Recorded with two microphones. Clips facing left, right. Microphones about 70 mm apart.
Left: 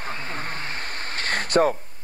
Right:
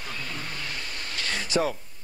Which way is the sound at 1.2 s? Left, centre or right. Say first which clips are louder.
Left 6 dB; left.